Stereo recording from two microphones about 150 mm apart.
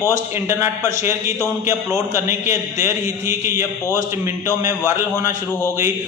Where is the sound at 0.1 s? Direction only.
20° right (ahead or behind).